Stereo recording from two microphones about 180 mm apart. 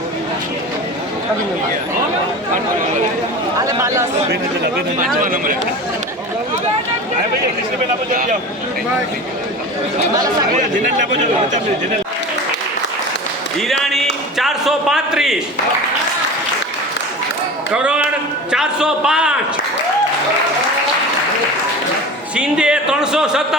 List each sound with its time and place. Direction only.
3.6 s speech: 15° right (ahead or behind)
5.2 s speech: 50° right (ahead or behind)
8.1 s speech: 50° right (ahead or behind)
10.6 s speech: 45° right (ahead or behind)
13.6 s a man's voice: centre (ahead or behind)
17.7 s a man's voice: 5° right (ahead or behind)
22.4 s a man's voice: 5° right (ahead or behind)